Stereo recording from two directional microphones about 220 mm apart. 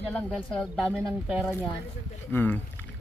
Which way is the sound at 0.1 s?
5° left (ahead or behind).